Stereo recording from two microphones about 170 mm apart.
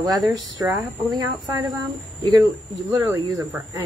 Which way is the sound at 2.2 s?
25° right (ahead or behind).